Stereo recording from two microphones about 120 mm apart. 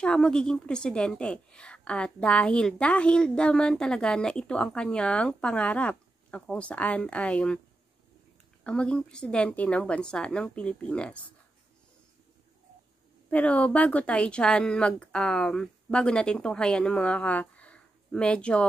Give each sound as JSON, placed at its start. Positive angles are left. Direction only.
{"t": 0.0, "sound": "a woman's voice", "side_deg": 5}
{"t": 8.6, "sound": "a woman's voice", "side_deg": 10}
{"t": 13.3, "sound": "a woman's voice", "side_deg": 10}